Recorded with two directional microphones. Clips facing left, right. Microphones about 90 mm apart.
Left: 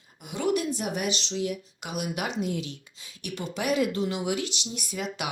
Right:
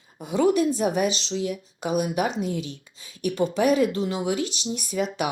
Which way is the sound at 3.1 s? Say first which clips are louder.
Right 10 dB; 35° right (ahead or behind).